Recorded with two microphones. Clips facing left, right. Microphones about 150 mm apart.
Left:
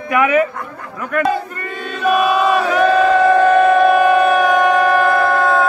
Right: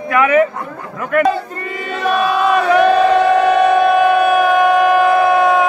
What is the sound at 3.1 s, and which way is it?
Music, 75° right (ahead or behind).